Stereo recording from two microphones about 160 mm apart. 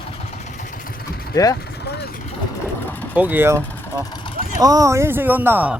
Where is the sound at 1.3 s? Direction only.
20° left (ahead or behind).